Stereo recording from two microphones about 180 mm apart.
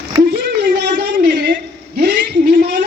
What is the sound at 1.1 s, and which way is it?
Speech, 55° right (ahead or behind).